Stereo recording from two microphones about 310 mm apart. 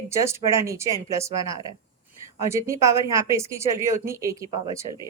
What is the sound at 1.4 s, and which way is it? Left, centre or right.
Speech, centre.